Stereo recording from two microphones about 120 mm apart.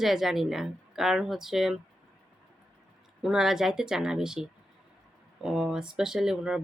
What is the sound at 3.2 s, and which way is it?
Speech, 5° right (ahead or behind).